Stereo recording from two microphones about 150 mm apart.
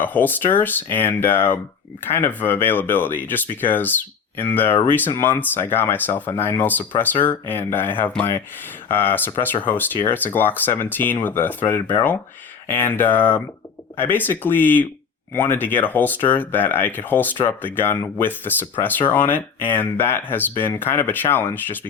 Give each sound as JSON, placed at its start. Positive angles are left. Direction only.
{"t": 0.0, "sound": "speech", "side_deg": 10}